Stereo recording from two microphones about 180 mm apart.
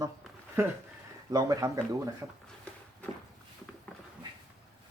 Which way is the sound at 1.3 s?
20° right (ahead or behind).